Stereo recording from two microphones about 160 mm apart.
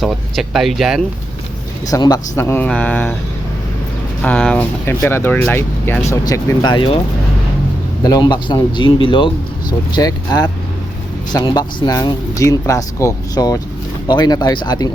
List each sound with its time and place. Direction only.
0.0 s speech: centre (ahead or behind)
1.9 s speech: 25° left (ahead or behind)
4.2 s speech: 10° left (ahead or behind); by 7.0 s 30° left (ahead or behind)
8.0 s speech: 25° left (ahead or behind)